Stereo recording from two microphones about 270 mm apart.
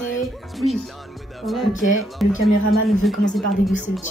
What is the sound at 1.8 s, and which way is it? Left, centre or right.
Speech, left.